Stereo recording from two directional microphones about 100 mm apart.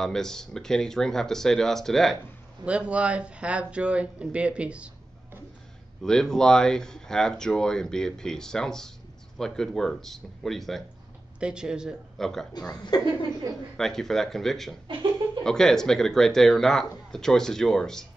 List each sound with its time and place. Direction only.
0.0 s speech: 5° left (ahead or behind)
2.6 s speech: 10° right (ahead or behind)
6.0 s speech: 5° left (ahead or behind)
11.3 s speech: 10° right (ahead or behind)
12.2 s speech: 5° left (ahead or behind)
12.9 s a woman's voice: 40° left (ahead or behind)
13.7 s speech: 5° left (ahead or behind)